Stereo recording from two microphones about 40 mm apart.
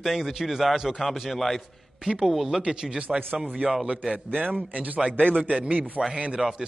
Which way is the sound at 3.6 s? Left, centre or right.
Right.